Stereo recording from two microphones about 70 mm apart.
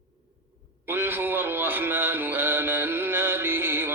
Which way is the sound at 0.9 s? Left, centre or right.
Right.